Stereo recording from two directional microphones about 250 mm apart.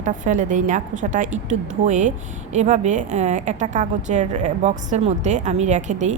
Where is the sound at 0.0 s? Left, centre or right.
Right.